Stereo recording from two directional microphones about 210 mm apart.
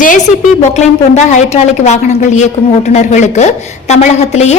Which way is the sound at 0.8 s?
35° left (ahead or behind).